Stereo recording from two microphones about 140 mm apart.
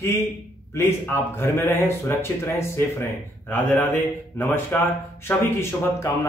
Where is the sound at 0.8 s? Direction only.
15° left (ahead or behind).